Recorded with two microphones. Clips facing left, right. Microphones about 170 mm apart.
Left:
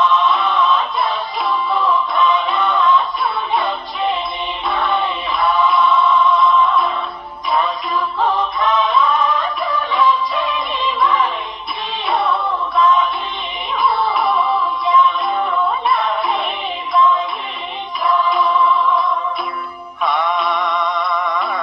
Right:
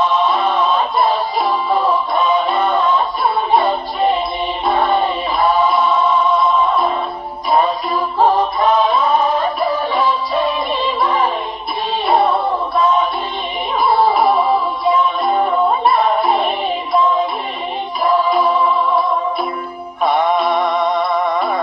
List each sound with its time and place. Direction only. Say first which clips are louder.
0.0 s music: right 1 dB; 40° right (ahead or behind)